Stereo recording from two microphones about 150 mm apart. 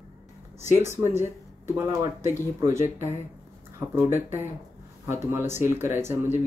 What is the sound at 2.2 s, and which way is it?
Speech, 20° right (ahead or behind).